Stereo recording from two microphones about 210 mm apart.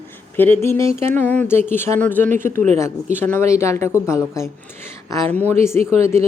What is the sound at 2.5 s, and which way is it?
Speech, 35° right (ahead or behind).